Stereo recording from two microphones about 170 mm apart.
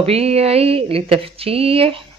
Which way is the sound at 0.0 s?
35° right (ahead or behind).